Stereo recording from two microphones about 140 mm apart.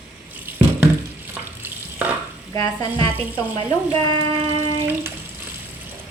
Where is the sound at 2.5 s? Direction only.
25° left (ahead or behind).